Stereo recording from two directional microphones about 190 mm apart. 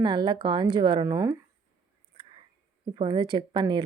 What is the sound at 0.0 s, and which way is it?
Speech, 25° right (ahead or behind).